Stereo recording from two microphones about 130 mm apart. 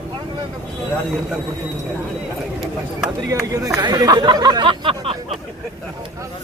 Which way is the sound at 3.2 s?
25° right (ahead or behind).